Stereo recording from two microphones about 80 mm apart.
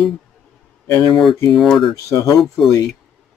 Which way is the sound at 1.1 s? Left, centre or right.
Centre.